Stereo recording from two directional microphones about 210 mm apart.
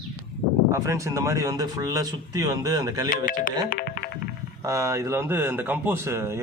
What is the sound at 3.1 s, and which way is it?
Speech, 40° left (ahead or behind).